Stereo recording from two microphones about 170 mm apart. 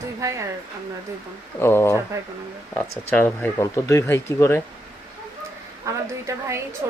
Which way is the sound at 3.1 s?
10° left (ahead or behind).